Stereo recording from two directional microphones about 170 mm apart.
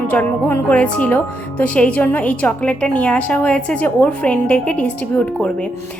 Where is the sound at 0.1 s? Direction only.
10° left (ahead or behind).